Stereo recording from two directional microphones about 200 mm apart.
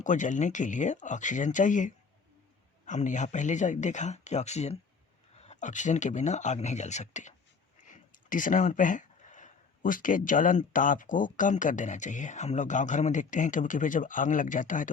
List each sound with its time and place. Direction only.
0.0 s speech: 40° left (ahead or behind)